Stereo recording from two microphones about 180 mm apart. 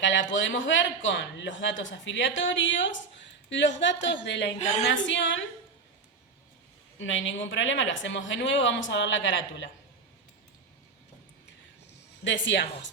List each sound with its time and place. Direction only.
0.0 s speech: 90° left
4.5 s a woman's voice: 40° left (ahead or behind)
4.9 s speech: 90° left
7.0 s speech: 90° left
12.2 s speech: 80° left